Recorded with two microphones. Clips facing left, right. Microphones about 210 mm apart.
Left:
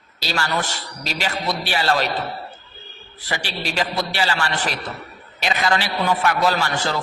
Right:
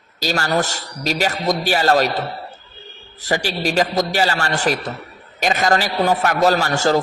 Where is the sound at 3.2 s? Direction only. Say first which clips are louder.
Right 7 dB; 45° right (ahead or behind).